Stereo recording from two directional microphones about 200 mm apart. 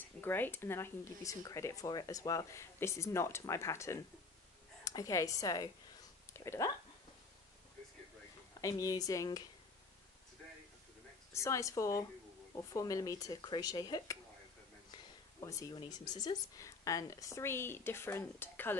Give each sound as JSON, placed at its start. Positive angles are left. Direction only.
{"t": 0.2, "sound": "speech", "side_deg": 10}
{"t": 8.5, "sound": "speech", "side_deg": 15}
{"t": 11.3, "sound": "speech", "side_deg": 15}
{"t": 15.4, "sound": "speech", "side_deg": 15}